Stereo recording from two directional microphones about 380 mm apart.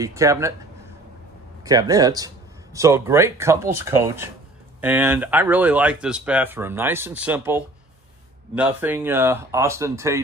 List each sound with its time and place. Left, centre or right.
0.0 s speech: centre
1.6 s speech: centre